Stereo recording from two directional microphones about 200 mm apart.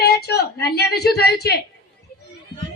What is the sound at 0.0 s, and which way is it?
A woman's voice, 55° left (ahead or behind).